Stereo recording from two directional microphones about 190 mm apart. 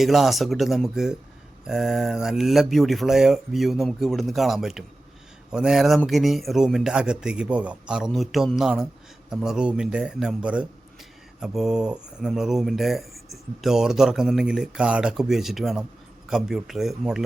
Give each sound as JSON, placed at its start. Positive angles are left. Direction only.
{"t": 0.0, "sound": "a man's voice", "side_deg": 0}